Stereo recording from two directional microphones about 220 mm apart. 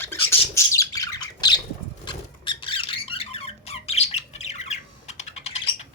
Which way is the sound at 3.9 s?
30° left (ahead or behind).